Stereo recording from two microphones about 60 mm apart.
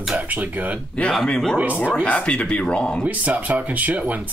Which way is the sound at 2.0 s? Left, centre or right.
Left.